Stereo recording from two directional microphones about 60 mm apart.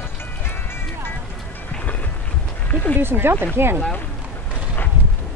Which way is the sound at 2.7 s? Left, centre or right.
Left.